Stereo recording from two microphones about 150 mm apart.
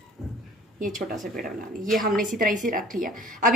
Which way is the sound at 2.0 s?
65° right (ahead or behind).